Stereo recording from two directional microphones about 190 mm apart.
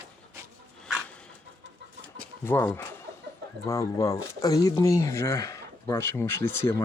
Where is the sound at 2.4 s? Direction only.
10° left (ahead or behind).